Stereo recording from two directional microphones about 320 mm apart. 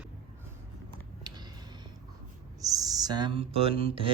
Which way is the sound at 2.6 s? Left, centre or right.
Centre.